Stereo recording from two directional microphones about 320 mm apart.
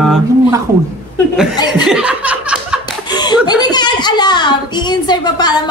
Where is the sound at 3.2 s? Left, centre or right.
Centre.